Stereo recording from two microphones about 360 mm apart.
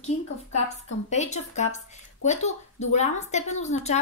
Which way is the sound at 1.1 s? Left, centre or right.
Centre.